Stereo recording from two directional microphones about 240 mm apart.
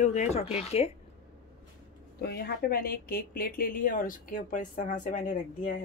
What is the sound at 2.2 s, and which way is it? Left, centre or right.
Speech, left.